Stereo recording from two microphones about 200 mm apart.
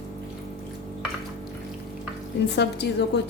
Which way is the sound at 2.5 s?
55° left (ahead or behind).